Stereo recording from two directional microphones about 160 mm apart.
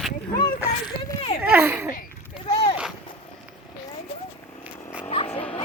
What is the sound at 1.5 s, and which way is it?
Speech, 15° right (ahead or behind).